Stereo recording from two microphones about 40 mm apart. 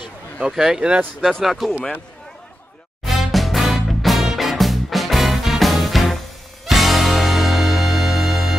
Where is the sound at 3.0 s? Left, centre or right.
Centre.